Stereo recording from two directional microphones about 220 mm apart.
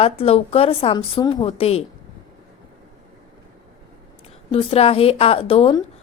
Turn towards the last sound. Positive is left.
turn(degrees=25)  # may be behind; listen again after turning